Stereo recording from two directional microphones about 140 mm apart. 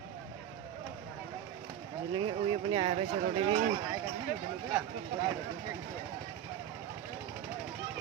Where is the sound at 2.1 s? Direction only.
35° right (ahead or behind).